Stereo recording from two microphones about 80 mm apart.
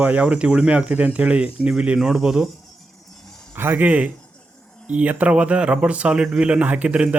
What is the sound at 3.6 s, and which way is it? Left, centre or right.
A man's voice, right.